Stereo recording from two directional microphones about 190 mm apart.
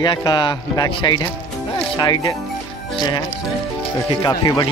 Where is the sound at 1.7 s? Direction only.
25° left (ahead or behind).